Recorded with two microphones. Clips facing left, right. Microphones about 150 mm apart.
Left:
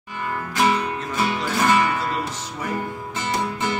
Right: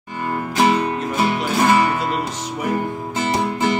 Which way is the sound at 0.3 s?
30° right (ahead or behind).